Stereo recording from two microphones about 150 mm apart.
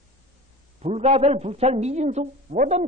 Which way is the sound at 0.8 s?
45° right (ahead or behind).